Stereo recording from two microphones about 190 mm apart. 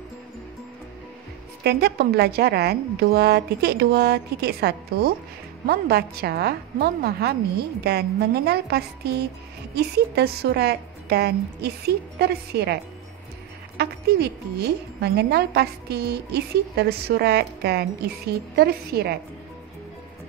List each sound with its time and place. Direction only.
1.6 s a woman's voice: 60° right (ahead or behind)
8.5 s a woman's voice: 60° right (ahead or behind)
13.7 s a woman's voice: 60° right (ahead or behind)